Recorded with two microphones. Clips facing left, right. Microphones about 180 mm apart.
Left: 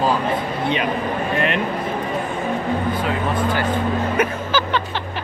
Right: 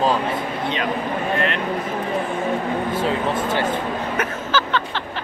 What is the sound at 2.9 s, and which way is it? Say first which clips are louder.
Speech: right 1 dB; 25° right (ahead or behind).